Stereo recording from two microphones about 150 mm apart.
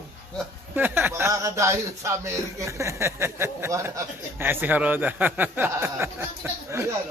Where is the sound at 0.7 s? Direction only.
15° right (ahead or behind).